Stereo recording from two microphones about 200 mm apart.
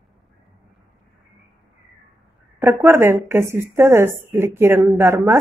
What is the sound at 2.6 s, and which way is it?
A woman's voice, 10° right (ahead or behind).